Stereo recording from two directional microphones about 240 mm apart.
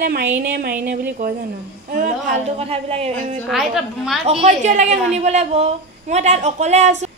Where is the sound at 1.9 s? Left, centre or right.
Right.